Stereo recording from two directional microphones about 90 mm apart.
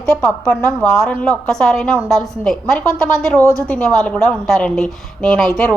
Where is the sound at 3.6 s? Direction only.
5° left (ahead or behind).